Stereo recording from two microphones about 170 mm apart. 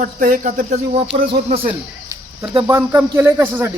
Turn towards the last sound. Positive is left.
turn(degrees=-15)  # may be behind; listen again after turning